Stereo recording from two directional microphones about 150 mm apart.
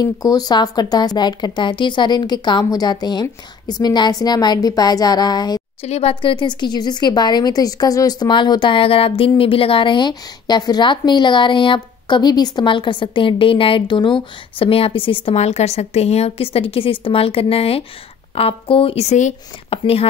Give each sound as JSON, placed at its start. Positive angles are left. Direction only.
{"t": 0.0, "sound": "speech", "side_deg": 25}
{"t": 5.8, "sound": "a woman's voice", "side_deg": 45}
{"t": 19.8, "sound": "a woman's voice", "side_deg": 40}